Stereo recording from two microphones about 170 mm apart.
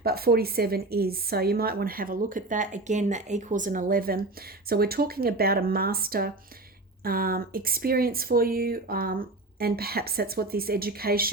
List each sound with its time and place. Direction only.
0.0 s a woman's voice: 65° right (ahead or behind)